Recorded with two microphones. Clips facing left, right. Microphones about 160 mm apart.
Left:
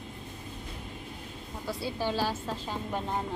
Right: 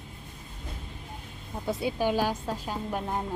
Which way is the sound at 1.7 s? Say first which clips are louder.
Right 5 dB; 20° right (ahead or behind).